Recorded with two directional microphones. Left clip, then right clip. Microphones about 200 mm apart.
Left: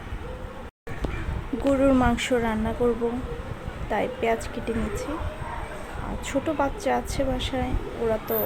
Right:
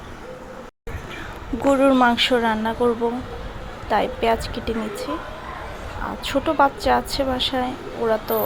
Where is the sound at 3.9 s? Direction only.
Centre (ahead or behind).